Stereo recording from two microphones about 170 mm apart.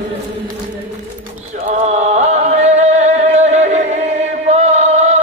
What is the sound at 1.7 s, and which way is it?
Music, 40° right (ahead or behind).